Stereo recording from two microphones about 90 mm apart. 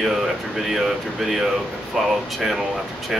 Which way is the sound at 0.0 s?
Centre (ahead or behind).